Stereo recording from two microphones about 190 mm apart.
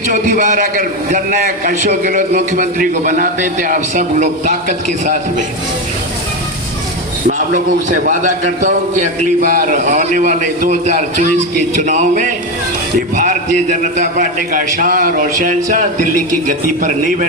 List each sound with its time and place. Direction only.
0.1 s a man's voice: 45° right (ahead or behind)
7.3 s a man's voice: 40° right (ahead or behind)
16.8 s a man's voice: 40° right (ahead or behind)